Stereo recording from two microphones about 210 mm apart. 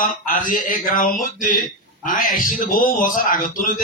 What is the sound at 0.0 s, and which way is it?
A man's voice, 40° left (ahead or behind).